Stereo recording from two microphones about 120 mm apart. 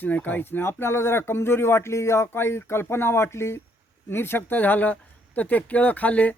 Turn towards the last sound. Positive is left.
turn(degrees=10)  # may be behind; listen again after turning